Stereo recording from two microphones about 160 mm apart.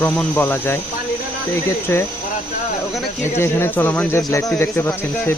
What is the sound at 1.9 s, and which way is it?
Speech, 15° left (ahead or behind).